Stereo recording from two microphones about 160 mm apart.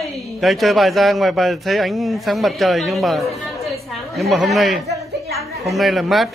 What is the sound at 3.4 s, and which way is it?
Chatter, centre (ahead or behind).